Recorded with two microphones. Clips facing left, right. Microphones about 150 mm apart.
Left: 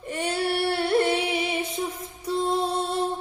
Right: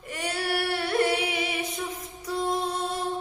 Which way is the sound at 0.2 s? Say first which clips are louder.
Left 3 dB; 25° left (ahead or behind).